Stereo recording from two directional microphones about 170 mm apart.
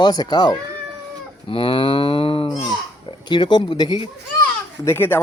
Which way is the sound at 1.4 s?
30° left (ahead or behind).